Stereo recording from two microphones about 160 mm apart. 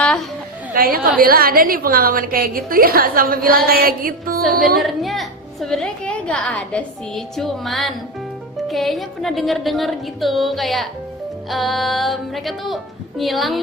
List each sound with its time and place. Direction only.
0.0 s a sound: 5° left (ahead or behind)
0.7 s a woman's voice: 65° right (ahead or behind)
4.8 s a woman's voice: centre (ahead or behind)